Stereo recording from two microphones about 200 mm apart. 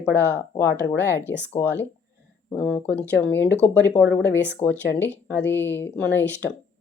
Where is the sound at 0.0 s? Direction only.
10° left (ahead or behind).